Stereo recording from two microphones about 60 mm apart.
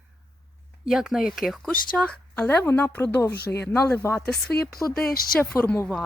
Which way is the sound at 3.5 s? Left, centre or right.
Left.